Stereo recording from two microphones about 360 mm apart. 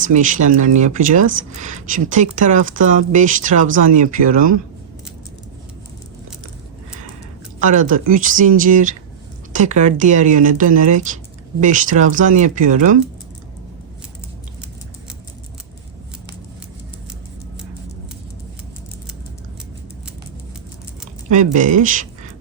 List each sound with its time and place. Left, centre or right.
0.0 s speech: right
7.6 s speech: right
21.2 s speech: right